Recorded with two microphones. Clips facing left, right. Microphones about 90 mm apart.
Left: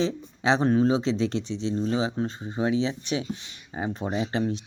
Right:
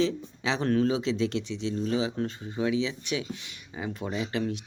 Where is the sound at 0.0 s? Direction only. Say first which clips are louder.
Left 2 dB; 30° left (ahead or behind).